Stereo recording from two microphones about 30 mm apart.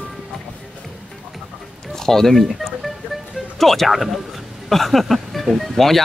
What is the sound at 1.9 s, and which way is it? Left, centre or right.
Speech, centre.